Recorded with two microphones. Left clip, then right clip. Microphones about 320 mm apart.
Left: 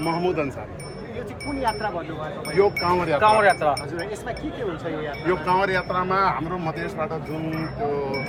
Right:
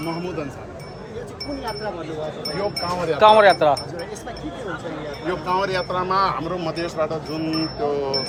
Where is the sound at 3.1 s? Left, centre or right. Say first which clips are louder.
Right 6 dB; right.